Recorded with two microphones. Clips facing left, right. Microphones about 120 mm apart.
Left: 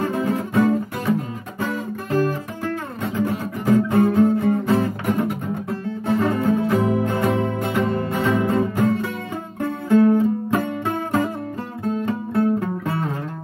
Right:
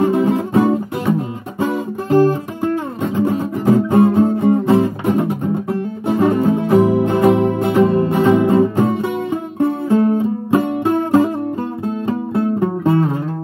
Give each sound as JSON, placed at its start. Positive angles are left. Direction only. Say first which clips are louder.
{"t": 0.0, "sound": "music", "louder": "right 7 dB", "side_deg": -25}